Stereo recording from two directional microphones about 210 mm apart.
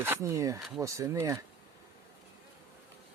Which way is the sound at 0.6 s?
Centre (ahead or behind).